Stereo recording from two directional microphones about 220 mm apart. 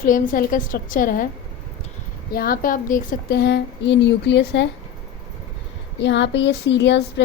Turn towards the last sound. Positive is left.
turn(degrees=50)  # may be behind; listen again after turning